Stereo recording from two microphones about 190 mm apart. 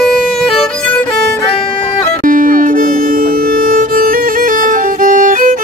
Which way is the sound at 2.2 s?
45° right (ahead or behind).